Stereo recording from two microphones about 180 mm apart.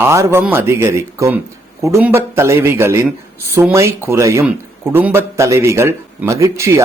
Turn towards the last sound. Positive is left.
turn(degrees=-15)  # may be behind; listen again after turning